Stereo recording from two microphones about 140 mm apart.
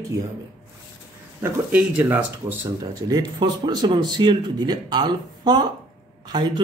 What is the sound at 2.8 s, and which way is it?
Speech, 25° right (ahead or behind).